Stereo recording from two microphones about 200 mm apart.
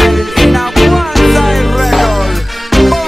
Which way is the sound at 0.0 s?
Centre (ahead or behind).